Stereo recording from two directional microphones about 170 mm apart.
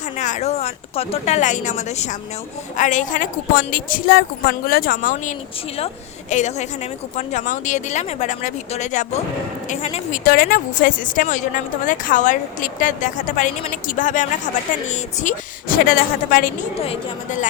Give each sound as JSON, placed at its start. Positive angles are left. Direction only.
{"t": 0.2, "sound": "a woman's voice", "side_deg": 45}
{"t": 6.3, "sound": "a woman's voice", "side_deg": 45}
{"t": 10.2, "sound": "a woman's voice", "side_deg": 60}
{"t": 16.8, "sound": "a woman's voice", "side_deg": 35}